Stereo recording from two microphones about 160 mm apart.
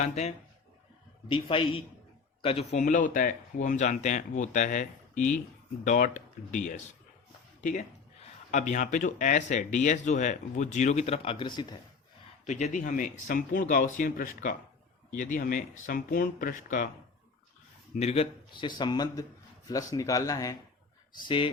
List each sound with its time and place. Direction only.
0.0 s speech: 45° left (ahead or behind)
1.3 s a man's voice: 35° left (ahead or behind); by 6.6 s 50° left (ahead or behind)
7.6 s speech: 50° left (ahead or behind); by 11.6 s 30° left (ahead or behind)
12.5 s speech: 45° left (ahead or behind)
17.9 s a man's voice: 40° left (ahead or behind); by 20.6 s 20° left (ahead or behind)
21.2 s a man's voice: 30° left (ahead or behind)